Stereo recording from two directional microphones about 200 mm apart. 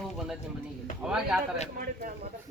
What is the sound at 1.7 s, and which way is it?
Speech, 45° right (ahead or behind).